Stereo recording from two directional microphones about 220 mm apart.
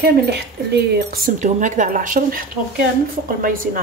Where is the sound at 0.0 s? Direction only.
50° right (ahead or behind).